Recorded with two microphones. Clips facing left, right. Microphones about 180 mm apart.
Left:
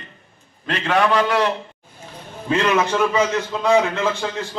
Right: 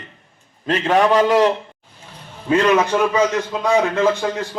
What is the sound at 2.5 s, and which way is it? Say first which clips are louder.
A man's voice: right 3 dB; 10° right (ahead or behind).